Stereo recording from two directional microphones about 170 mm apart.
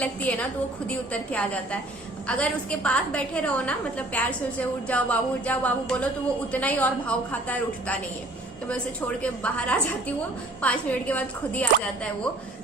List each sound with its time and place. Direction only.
0.0 s a woman's voice: 10° left (ahead or behind)
9.2 s a woman's voice: 5° left (ahead or behind)